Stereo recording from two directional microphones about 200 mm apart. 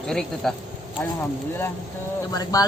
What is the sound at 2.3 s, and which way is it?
Speech, 20° left (ahead or behind).